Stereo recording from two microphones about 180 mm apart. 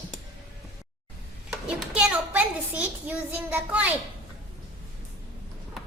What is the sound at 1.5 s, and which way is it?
A child's voice, 5° right (ahead or behind).